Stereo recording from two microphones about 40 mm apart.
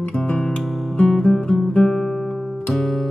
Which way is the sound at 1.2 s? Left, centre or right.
Centre.